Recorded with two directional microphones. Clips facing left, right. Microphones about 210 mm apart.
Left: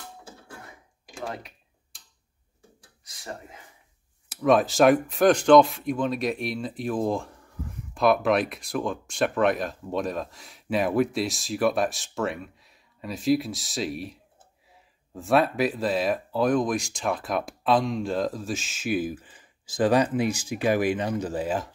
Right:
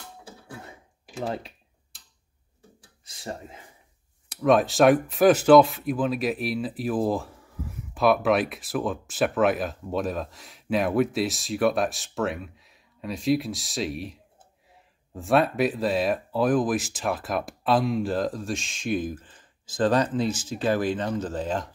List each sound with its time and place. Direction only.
1.2 s speech: 30° right (ahead or behind)
3.1 s speech: 25° right (ahead or behind)
4.3 s speech: centre (ahead or behind)